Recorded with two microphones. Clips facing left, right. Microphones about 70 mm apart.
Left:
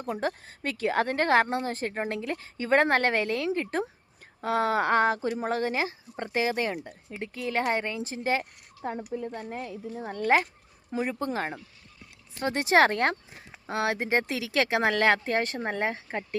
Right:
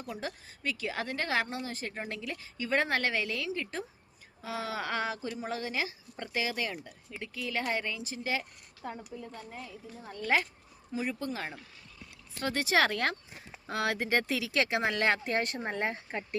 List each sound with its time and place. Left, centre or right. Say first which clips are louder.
0.0 s speech: left 8 dB; left
9.0 s speech: left 9 dB; left
10.9 s speech: left 5 dB; left
12.4 s speech: left 6 dB; left
13.7 s speech: left 3 dB; left
14.8 s speech: left 5 dB; left